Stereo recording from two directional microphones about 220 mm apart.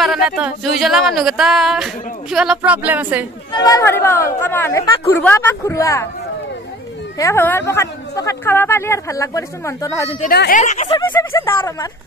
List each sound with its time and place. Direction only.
0.0 s speech: centre (ahead or behind)
3.5 s a woman's voice: 15° left (ahead or behind)
7.2 s a woman's voice: 10° left (ahead or behind)
10.2 s a woman's voice: 45° left (ahead or behind)
10.6 s speech: 35° left (ahead or behind)
11.0 s a woman's voice: 10° left (ahead or behind)